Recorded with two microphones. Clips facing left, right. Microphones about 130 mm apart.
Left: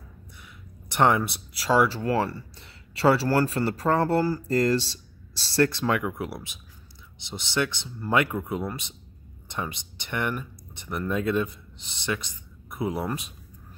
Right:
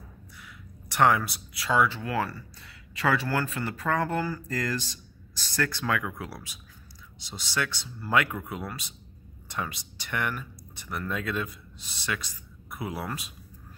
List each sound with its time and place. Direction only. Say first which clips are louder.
0.8 s speech: left 1 dB; 25° left (ahead or behind)